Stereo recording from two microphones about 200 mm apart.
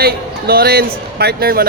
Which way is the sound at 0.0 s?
50° right (ahead or behind).